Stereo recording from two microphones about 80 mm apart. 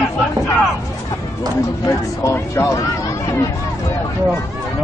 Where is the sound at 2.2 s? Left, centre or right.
Left.